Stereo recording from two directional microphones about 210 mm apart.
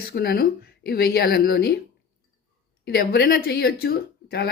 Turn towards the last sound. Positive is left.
turn(degrees=45)  # may be behind; listen again after turning